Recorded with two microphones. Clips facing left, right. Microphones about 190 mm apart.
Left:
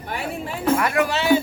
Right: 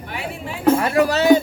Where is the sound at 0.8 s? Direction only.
35° right (ahead or behind).